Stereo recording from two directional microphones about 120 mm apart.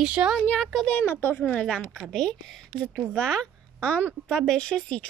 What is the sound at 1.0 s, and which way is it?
A woman's voice, 20° left (ahead or behind).